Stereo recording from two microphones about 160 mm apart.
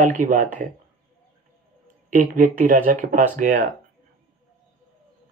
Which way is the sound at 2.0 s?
55° right (ahead or behind).